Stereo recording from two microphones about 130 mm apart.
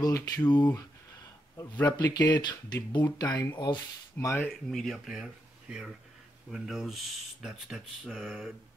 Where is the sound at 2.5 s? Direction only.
30° left (ahead or behind).